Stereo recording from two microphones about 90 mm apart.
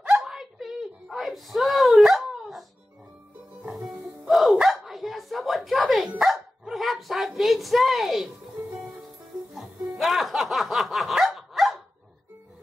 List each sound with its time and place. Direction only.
0.0 s a sound: 5° right (ahead or behind)
3.7 s music: 5° right (ahead or behind)
6.0 s dog: 5° right (ahead or behind)
9.5 s music: 5° right (ahead or behind)